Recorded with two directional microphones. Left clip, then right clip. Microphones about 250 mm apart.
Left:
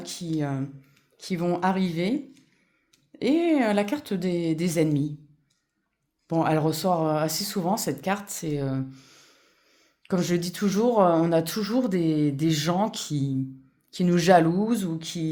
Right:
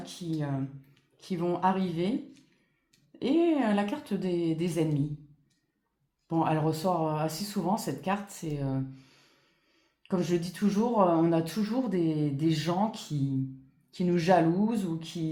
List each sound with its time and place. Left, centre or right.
0.0 s speech: left
3.2 s speech: left
6.2 s speech: left